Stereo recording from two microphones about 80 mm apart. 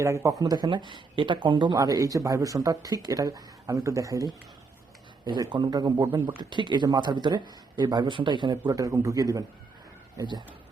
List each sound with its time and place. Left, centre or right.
0.0 s a man's voice: right
6.5 s speech: right
6.8 s speech: right
8.7 s speech: right